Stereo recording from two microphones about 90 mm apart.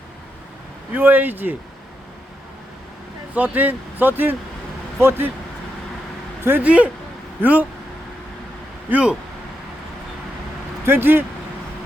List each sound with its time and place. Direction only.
0.9 s speech: 20° right (ahead or behind)
3.3 s speech: 20° right (ahead or behind)
6.4 s speech: 20° right (ahead or behind)
8.9 s speech: 15° right (ahead or behind)
10.8 s speech: 25° right (ahead or behind)